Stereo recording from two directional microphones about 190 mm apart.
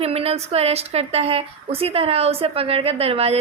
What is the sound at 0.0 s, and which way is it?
A woman's voice, 30° right (ahead or behind).